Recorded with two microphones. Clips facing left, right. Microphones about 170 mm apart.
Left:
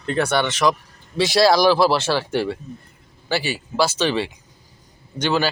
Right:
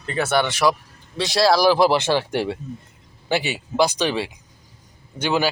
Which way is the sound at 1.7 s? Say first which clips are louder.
Right 1 dB; 15° right (ahead or behind).